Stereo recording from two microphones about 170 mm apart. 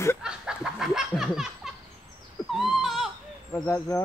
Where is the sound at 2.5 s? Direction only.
Centre (ahead or behind).